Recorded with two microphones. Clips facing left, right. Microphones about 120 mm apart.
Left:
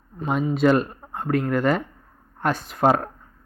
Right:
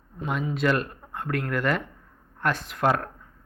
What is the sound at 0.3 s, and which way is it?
Speech, 50° left (ahead or behind).